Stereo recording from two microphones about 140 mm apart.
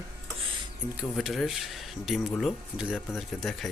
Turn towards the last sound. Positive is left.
turn(degrees=0)  # may be behind; listen again after turning